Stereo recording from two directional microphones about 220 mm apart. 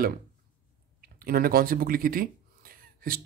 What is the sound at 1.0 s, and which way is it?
Speech, 40° right (ahead or behind).